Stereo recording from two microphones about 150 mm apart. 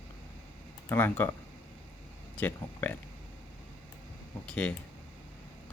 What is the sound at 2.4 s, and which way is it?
Speech, 10° left (ahead or behind).